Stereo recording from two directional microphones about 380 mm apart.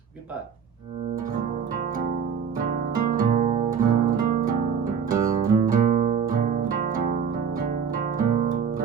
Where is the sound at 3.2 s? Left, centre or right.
Right.